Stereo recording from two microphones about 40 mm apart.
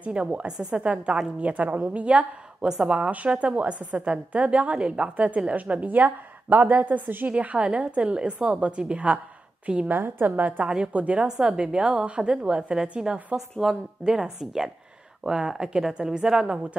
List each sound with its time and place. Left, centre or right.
0.1 s a woman's voice: right
7.2 s a woman's voice: right
9.8 s a woman's voice: right
11.4 s a woman's voice: right
13.6 s a woman's voice: centre